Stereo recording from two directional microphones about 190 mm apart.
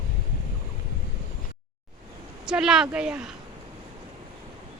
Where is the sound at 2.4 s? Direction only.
5° right (ahead or behind).